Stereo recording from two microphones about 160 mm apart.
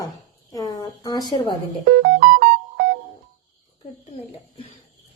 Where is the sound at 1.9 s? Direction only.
60° right (ahead or behind).